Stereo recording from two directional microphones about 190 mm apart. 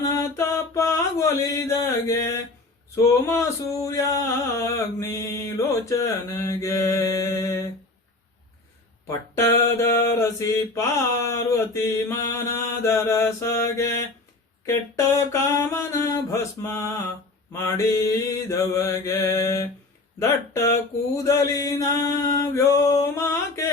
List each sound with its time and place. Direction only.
0.1 s mantra: 15° left (ahead or behind)
4.6 s mantra: 15° left (ahead or behind)
9.0 s mantra: 15° left (ahead or behind)
20.1 s speech: 15° left (ahead or behind)
21.2 s mantra: 15° left (ahead or behind)